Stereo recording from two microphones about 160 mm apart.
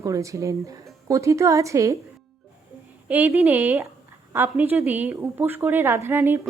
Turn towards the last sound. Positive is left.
turn(degrees=-15)  # may be behind; listen again after turning